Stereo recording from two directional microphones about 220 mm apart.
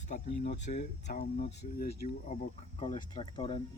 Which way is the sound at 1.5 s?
50° left (ahead or behind).